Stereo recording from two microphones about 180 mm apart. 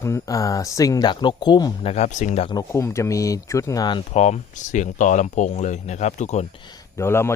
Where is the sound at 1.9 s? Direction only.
40° left (ahead or behind).